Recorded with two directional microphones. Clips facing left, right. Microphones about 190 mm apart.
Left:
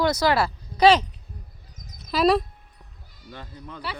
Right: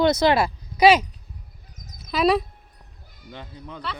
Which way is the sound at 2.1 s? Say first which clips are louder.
Even; centre (ahead or behind).